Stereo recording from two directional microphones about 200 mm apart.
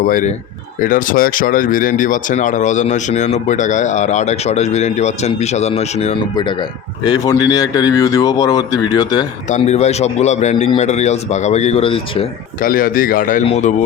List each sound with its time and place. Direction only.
0.0 s speech: 45° left (ahead or behind)
6.3 s a man's voice: 20° left (ahead or behind)
9.5 s speech: 35° left (ahead or behind)
12.6 s speech: 45° left (ahead or behind)